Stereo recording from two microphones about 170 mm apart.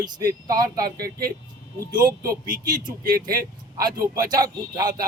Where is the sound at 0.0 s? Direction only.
20° right (ahead or behind).